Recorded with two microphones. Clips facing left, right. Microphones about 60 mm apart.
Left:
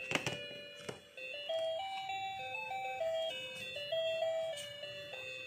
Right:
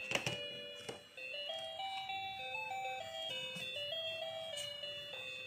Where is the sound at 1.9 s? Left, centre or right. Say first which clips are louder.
Left 3 dB; centre.